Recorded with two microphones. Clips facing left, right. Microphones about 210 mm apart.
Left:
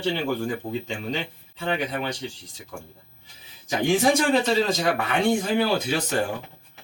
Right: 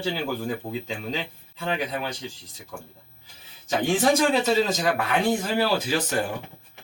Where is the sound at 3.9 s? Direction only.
Centre (ahead or behind).